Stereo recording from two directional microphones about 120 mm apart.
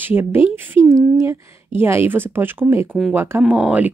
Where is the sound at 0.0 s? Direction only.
15° right (ahead or behind).